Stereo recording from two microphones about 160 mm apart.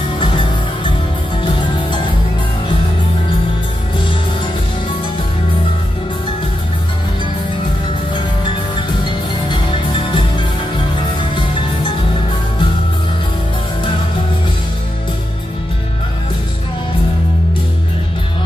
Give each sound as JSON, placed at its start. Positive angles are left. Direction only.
{"t": 9.5, "sound": "music", "side_deg": 30}